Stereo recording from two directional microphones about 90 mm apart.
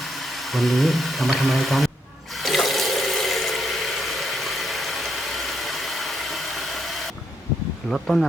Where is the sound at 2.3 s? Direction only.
Centre (ahead or behind).